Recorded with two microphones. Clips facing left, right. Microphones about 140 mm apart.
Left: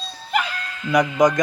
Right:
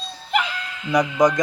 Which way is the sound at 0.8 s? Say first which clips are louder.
Left 1 dB; 30° right (ahead or behind).